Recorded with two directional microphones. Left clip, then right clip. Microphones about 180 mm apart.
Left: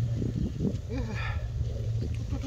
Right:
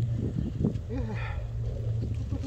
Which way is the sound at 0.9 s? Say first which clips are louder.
Left 1 dB; 30° right (ahead or behind).